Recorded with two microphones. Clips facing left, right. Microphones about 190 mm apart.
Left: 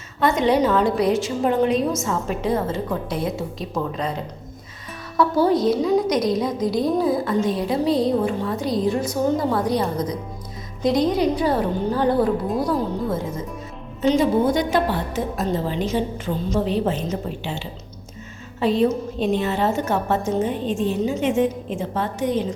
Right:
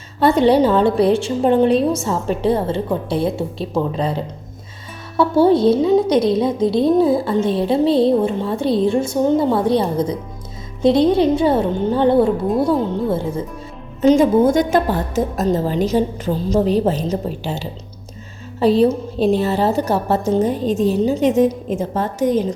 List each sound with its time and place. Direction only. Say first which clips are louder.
0.2 s a woman's voice: right 5 dB; 35° right (ahead or behind)
14.0 s a woman's voice: right 6 dB; 45° right (ahead or behind)